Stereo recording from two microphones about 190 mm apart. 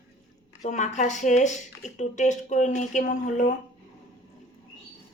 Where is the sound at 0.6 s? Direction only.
40° left (ahead or behind).